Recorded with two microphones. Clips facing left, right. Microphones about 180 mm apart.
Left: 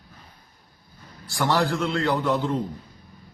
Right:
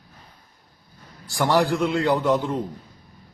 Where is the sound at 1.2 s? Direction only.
15° right (ahead or behind).